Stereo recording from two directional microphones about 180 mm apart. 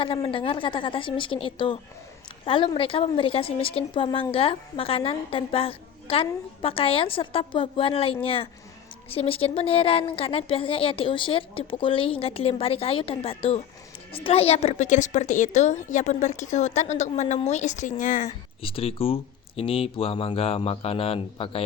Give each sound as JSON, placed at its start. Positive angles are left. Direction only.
{"t": 0.0, "sound": "a woman's voice", "side_deg": 30}
{"t": 18.6, "sound": "a woman's voice", "side_deg": 30}